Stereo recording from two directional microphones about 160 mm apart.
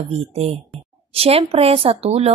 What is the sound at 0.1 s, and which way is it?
A woman's voice, 40° right (ahead or behind).